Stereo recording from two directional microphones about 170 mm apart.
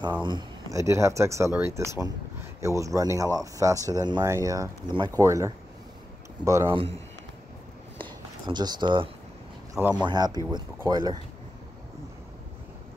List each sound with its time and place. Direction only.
0.2 s speech: 25° right (ahead or behind)
6.7 s speech: 35° right (ahead or behind)
8.0 s a sound: 25° right (ahead or behind)
9.8 s speech: 5° right (ahead or behind)
10.0 s speech: 25° right (ahead or behind)